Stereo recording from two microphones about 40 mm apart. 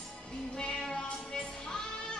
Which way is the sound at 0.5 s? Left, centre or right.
Centre.